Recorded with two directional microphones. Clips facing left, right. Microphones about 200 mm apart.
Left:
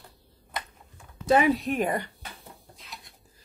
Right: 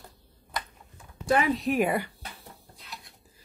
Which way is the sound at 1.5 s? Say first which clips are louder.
Right 2 dB; 5° right (ahead or behind).